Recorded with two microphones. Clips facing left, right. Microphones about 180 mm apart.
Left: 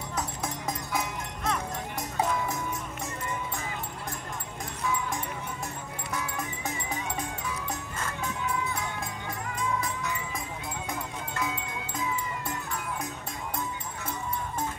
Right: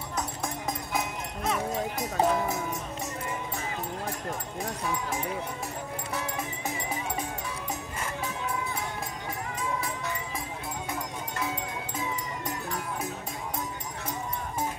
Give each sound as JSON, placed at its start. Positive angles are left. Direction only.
{"t": 1.4, "sound": "music", "side_deg": 0}
{"t": 2.1, "sound": "music", "side_deg": -35}